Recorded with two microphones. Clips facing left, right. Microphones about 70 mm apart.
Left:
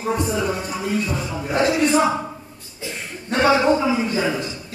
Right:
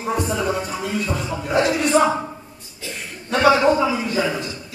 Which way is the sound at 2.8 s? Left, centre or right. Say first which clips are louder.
Left 2 dB; centre.